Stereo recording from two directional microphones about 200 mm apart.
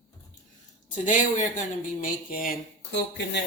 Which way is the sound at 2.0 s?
45° left (ahead or behind).